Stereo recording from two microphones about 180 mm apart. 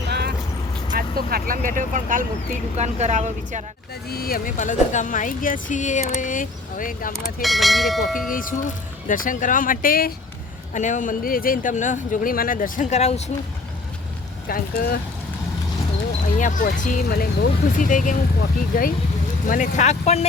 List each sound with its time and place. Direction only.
0.1 s vehicle: 65° right (ahead or behind)
0.9 s speech: 55° right (ahead or behind); by 3.6 s 40° right (ahead or behind)
4.1 s speech: 55° left (ahead or behind)
4.5 s speech: 45° left (ahead or behind)
7.4 s speech: centre (ahead or behind)
8.3 s speech: 50° left (ahead or behind)
14.4 s speech: 55° left (ahead or behind)
16.4 s speech: 45° left (ahead or behind)